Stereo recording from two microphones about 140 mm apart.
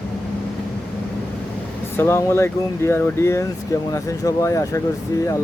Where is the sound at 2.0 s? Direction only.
20° left (ahead or behind).